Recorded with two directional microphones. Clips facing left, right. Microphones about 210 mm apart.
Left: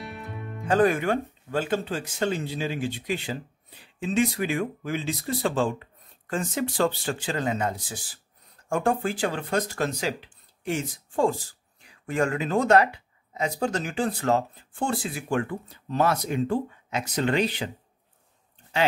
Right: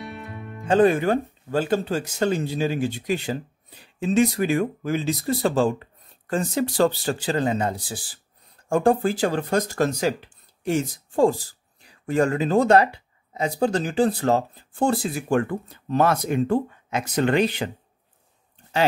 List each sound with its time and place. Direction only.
0.0 s music: centre (ahead or behind)
0.7 s speech: 25° right (ahead or behind); by 17.6 s 55° right (ahead or behind)